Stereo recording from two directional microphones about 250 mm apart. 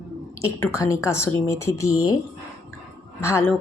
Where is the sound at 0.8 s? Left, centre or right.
Centre.